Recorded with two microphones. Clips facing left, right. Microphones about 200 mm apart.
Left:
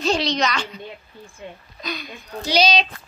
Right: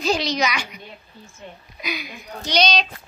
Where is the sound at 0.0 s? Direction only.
Centre (ahead or behind).